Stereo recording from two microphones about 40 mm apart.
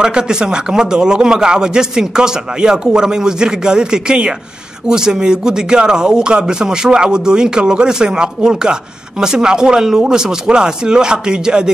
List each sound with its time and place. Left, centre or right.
0.0 s a man's voice: centre